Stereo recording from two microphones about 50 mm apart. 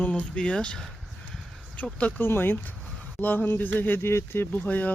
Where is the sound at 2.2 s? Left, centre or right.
Left.